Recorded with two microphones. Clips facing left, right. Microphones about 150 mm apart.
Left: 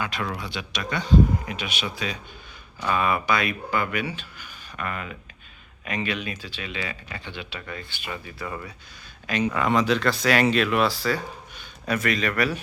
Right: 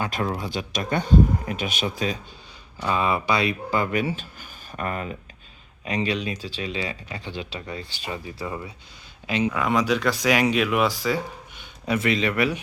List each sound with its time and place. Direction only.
0.0 s speech: 40° right (ahead or behind)
2.8 s speech: 25° right (ahead or behind)
8.4 s speech: 20° right (ahead or behind)
9.4 s a man's voice: 5° right (ahead or behind)